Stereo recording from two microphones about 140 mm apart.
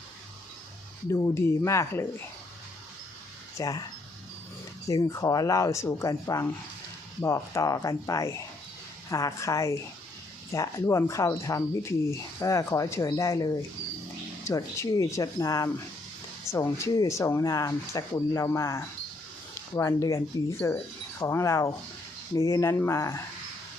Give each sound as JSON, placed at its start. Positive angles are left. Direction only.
{"t": 1.1, "sound": "speech", "side_deg": 20}
{"t": 3.6, "sound": "speech", "side_deg": 25}
{"t": 4.9, "sound": "speech", "side_deg": 25}